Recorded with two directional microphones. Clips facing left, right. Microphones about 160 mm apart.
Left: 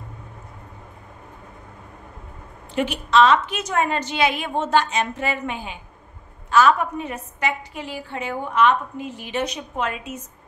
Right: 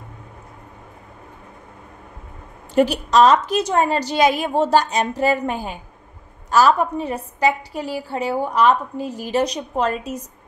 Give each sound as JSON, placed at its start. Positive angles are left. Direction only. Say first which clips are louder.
{"t": 2.7, "sound": "a woman's voice", "louder": "right 4 dB", "side_deg": -40}